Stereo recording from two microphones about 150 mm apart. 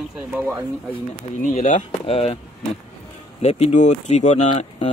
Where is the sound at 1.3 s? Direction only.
55° left (ahead or behind).